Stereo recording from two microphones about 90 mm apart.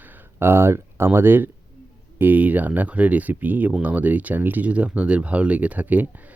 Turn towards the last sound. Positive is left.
turn(degrees=-20)  # may be behind; listen again after turning